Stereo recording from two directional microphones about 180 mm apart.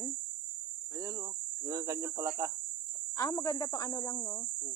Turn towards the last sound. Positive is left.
turn(degrees=20)  # may be behind; listen again after turning